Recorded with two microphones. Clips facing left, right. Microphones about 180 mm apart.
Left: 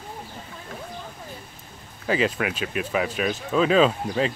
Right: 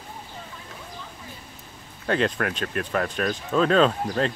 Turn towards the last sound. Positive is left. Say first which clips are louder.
# left 1 dB
turn(degrees=5)  # may be behind; listen again after turning